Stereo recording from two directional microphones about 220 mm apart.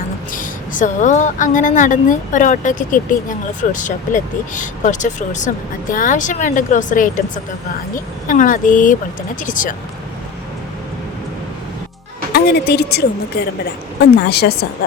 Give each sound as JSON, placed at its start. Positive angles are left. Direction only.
{"t": 0.3, "sound": "a woman's voice", "side_deg": 35}
{"t": 12.3, "sound": "speech", "side_deg": 45}
{"t": 14.3, "sound": "speech", "side_deg": 45}